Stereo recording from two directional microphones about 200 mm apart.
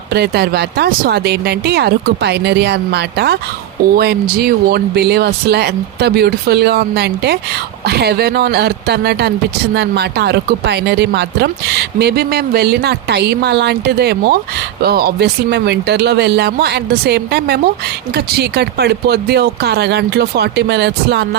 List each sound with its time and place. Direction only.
0.1 s speech: 55° right (ahead or behind)